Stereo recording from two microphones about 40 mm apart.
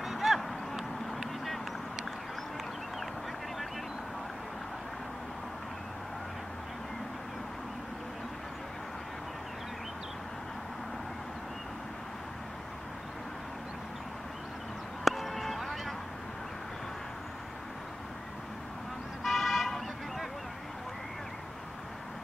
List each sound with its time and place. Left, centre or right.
0.0 s a sound: centre
15.0 s music: centre
19.2 s vehicle: centre